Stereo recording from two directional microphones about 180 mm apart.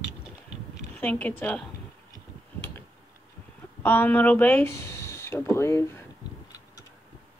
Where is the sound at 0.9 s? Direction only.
10° left (ahead or behind).